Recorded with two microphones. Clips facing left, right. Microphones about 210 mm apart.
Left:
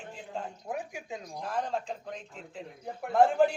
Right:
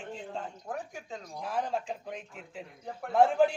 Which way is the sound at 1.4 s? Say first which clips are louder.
Right 1 dB; 5° right (ahead or behind).